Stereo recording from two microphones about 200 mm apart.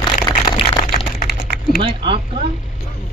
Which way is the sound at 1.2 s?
50° left (ahead or behind).